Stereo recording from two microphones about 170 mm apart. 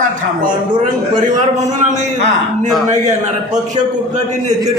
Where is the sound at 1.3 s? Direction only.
45° right (ahead or behind).